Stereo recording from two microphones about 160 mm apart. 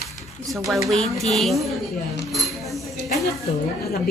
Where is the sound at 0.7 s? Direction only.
Centre (ahead or behind).